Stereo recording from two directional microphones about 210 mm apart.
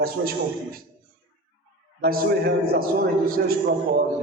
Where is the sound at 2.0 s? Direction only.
50° right (ahead or behind).